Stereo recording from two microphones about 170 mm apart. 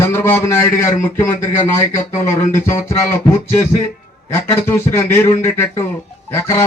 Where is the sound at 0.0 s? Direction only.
15° left (ahead or behind).